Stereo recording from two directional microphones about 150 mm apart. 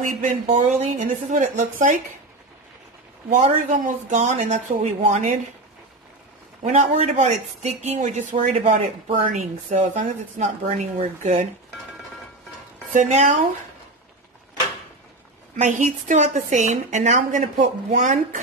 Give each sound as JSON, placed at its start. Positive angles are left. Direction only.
{"t": 0.0, "sound": "a woman's voice", "side_deg": -60}
{"t": 3.3, "sound": "a woman's voice", "side_deg": -55}
{"t": 6.6, "sound": "a woman's voice", "side_deg": -55}
{"t": 12.9, "sound": "a woman's voice", "side_deg": -55}
{"t": 15.5, "sound": "a woman's voice", "side_deg": -55}